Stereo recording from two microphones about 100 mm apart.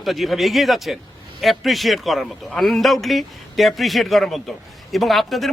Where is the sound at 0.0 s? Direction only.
Centre (ahead or behind).